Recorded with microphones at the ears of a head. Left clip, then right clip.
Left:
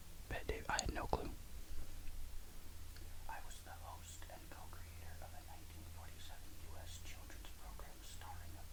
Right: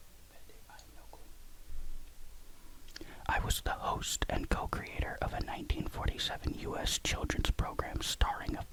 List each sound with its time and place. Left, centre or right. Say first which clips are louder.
0.3 s whispering: left 16 dB; left
2.9 s whispering: right 18 dB; right